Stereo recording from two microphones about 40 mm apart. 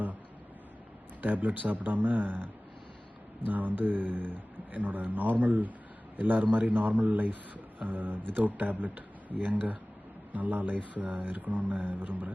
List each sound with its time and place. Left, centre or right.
1.2 s speech: right
3.4 s speech: right